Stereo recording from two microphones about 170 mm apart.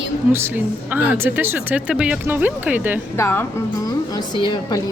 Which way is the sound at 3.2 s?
15° left (ahead or behind).